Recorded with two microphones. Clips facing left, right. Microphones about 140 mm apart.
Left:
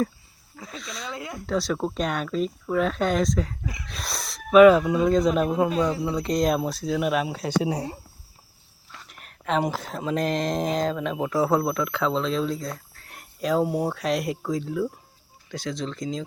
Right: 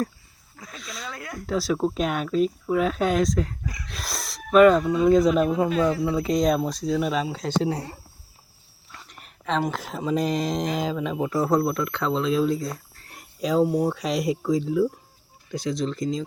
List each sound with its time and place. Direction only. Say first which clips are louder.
0.8 s speech: left 1 dB; centre (ahead or behind)
1.1 s speech: left 2 dB; 20° left (ahead or behind)
1.5 s speech: right 2 dB; 5° right (ahead or behind)
5.0 s speech: right 6 dB; centre (ahead or behind)
8.9 s a sound: even; centre (ahead or behind)
9.8 s speech: right 1 dB; centre (ahead or behind)